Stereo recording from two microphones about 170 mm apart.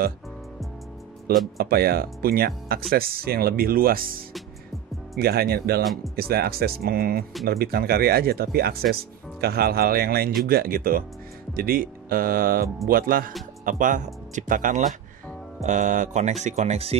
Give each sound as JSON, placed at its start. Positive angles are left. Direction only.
{"t": 1.6, "sound": "speech", "side_deg": -65}
{"t": 5.2, "sound": "speech", "side_deg": -65}